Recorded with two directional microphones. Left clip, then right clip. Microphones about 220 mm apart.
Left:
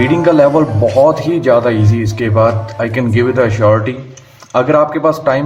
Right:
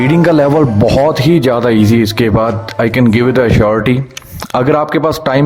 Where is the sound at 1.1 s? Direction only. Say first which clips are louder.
Even; 45° right (ahead or behind).